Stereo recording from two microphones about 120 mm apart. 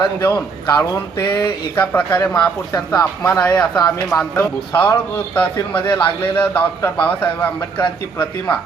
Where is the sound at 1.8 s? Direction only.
15° left (ahead or behind).